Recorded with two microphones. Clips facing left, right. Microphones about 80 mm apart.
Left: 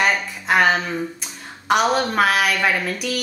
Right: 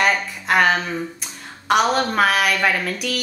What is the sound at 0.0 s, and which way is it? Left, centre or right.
Speech, centre.